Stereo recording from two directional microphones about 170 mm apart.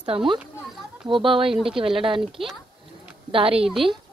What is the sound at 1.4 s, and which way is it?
Speech, 5° right (ahead or behind).